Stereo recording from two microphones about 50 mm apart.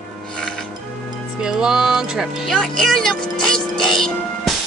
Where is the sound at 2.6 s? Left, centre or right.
Centre.